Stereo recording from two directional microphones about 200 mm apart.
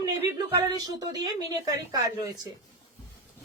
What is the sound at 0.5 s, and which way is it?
Speech, 20° right (ahead or behind).